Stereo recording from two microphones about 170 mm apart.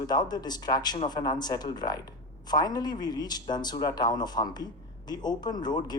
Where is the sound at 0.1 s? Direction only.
25° left (ahead or behind).